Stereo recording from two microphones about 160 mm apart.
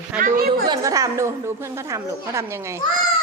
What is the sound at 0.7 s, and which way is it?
Speech, 20° right (ahead or behind).